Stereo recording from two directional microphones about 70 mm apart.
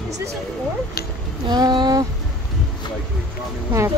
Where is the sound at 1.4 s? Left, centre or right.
Right.